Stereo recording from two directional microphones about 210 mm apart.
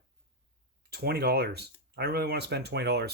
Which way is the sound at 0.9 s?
50° right (ahead or behind).